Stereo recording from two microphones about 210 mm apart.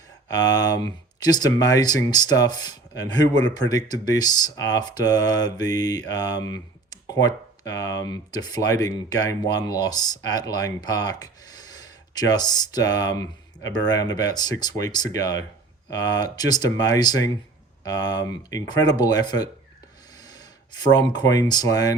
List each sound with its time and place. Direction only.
0.3 s speech: 15° left (ahead or behind)
20.1 s a sound: 20° left (ahead or behind)
20.9 s speech: 20° left (ahead or behind)